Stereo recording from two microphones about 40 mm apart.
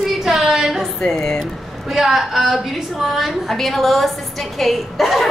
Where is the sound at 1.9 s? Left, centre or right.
Centre.